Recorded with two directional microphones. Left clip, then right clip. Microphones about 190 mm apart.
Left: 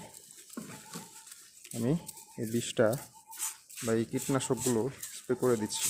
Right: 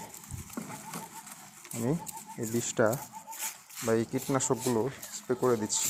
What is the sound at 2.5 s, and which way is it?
Speech, 20° left (ahead or behind).